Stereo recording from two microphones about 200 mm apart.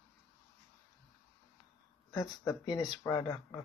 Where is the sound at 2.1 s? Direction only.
20° left (ahead or behind).